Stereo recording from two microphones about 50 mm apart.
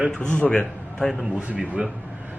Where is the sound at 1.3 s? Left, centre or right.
Right.